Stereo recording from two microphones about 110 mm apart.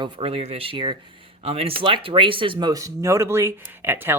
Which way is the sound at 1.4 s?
65° right (ahead or behind).